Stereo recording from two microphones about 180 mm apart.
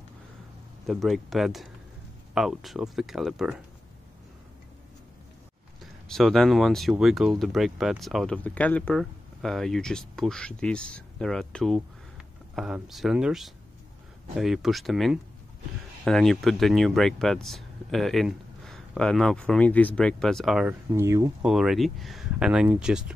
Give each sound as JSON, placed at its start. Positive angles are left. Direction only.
{"t": 0.8, "sound": "speech", "side_deg": 0}
{"t": 6.0, "sound": "speech", "side_deg": 0}
{"t": 20.9, "sound": "speech", "side_deg": -15}
{"t": 21.4, "sound": "speech", "side_deg": -5}